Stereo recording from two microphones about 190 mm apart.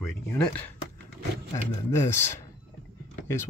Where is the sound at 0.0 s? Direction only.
10° left (ahead or behind).